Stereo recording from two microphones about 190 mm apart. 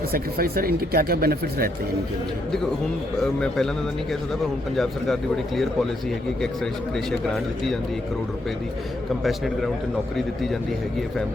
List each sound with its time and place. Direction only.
0.1 s speech: 55° right (ahead or behind)
3.2 s speech: 5° left (ahead or behind)
4.8 s speech: centre (ahead or behind)
6.9 s speech: centre (ahead or behind)
10.2 s speech: centre (ahead or behind)